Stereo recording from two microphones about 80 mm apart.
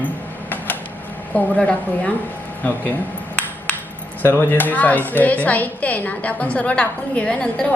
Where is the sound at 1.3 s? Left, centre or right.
Centre.